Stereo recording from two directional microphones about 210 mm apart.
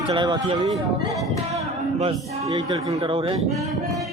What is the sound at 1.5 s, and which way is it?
Music, 30° right (ahead or behind).